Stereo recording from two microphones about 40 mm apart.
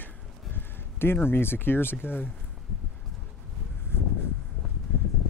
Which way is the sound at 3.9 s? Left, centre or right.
Left.